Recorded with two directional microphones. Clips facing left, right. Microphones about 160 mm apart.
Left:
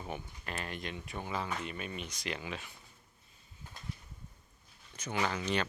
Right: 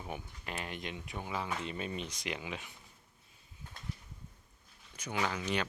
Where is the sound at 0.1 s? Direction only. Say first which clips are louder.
Even; 15° right (ahead or behind).